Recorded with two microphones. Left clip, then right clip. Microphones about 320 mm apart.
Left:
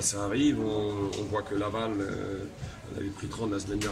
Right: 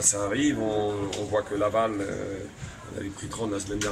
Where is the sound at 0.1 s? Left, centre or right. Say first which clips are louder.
Right 2 dB; centre.